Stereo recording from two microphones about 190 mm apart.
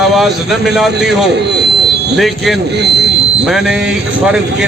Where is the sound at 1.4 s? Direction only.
60° right (ahead or behind).